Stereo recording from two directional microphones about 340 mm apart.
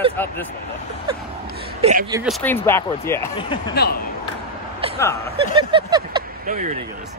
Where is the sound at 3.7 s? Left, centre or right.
Left.